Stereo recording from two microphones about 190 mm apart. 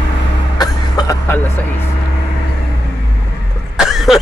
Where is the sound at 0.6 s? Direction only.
20° left (ahead or behind).